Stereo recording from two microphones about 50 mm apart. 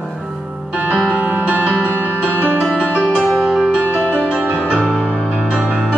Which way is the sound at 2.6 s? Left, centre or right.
Centre.